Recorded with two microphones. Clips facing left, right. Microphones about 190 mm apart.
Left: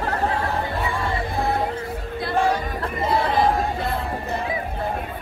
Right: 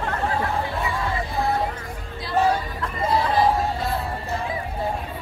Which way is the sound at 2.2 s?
55° left (ahead or behind).